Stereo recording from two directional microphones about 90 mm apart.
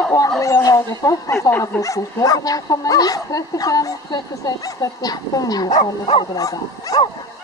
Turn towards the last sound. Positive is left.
turn(degrees=40)  # may be behind; listen again after turning